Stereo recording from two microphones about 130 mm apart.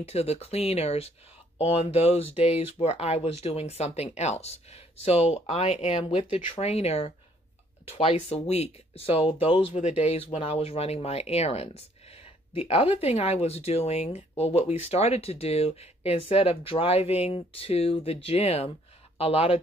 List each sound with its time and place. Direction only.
0.0 s speech: 50° left (ahead or behind)